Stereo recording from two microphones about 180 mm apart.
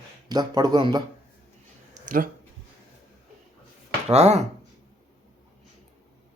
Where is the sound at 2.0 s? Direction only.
50° right (ahead or behind).